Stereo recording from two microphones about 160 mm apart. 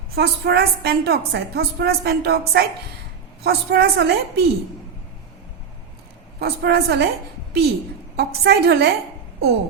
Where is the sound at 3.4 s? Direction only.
85° right.